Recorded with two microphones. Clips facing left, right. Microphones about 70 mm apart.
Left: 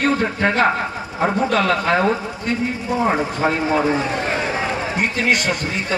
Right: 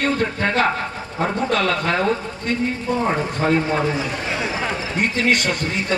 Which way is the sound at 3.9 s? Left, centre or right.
Left.